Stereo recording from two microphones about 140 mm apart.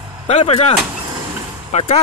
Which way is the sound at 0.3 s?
50° left (ahead or behind).